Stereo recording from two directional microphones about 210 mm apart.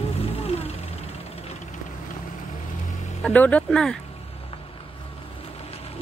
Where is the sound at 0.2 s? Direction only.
30° left (ahead or behind).